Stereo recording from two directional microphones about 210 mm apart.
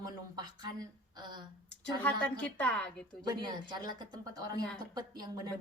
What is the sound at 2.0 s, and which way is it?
Speech, 10° left (ahead or behind).